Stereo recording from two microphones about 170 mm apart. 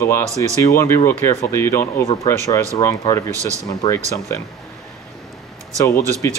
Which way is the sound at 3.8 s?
20° left (ahead or behind).